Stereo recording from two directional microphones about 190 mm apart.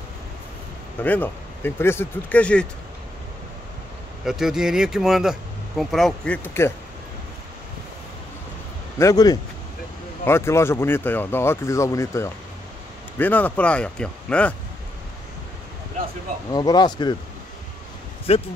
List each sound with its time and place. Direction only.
1.0 s speech: 10° left (ahead or behind)
4.2 s speech: centre (ahead or behind)
8.9 s speech: 15° left (ahead or behind)
16.5 s speech: 20° left (ahead or behind)
18.3 s speech: 30° left (ahead or behind)